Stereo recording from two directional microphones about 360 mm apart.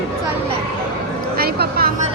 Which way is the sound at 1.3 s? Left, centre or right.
Right.